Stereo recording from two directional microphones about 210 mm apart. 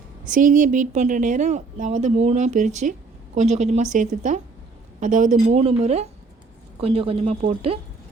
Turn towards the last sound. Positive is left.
turn(degrees=-25)  # may be behind; listen again after turning